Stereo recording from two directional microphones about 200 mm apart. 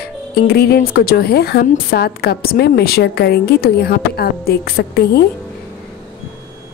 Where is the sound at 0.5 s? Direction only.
55° left (ahead or behind).